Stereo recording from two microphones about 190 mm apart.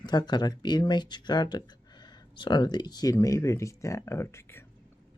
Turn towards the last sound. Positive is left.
turn(degrees=15)  # may be behind; listen again after turning